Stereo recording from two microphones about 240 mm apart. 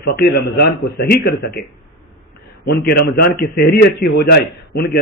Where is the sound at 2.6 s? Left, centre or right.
Left.